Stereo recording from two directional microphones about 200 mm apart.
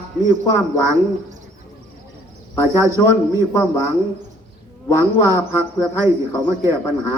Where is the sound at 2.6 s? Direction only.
15° right (ahead or behind).